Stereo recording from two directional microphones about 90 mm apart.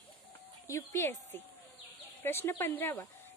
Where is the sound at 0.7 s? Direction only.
30° left (ahead or behind).